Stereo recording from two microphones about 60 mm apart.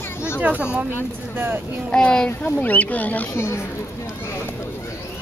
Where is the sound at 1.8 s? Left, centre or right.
Centre.